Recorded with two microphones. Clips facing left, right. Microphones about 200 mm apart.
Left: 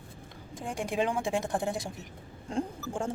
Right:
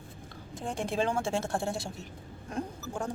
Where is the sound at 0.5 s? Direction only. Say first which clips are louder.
Even; 10° left (ahead or behind).